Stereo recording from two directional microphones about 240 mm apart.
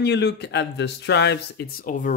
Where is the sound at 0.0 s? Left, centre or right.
Left.